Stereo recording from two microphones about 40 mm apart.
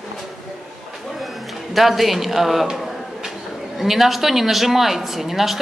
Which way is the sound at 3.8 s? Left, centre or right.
Centre.